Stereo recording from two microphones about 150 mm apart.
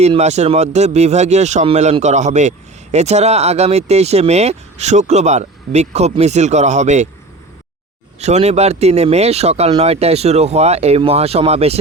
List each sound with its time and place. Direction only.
0.0 s speech: 45° right (ahead or behind)
8.2 s speech: 45° right (ahead or behind)